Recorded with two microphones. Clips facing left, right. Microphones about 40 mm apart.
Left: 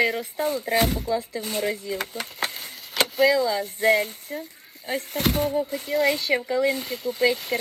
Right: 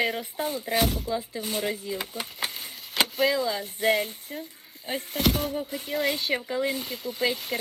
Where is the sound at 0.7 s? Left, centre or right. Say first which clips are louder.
Left 1 dB; left.